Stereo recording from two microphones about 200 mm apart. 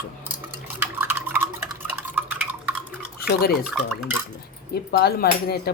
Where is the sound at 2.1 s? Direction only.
5° right (ahead or behind).